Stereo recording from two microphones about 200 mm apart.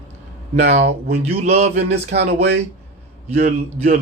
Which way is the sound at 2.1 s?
55° right (ahead or behind).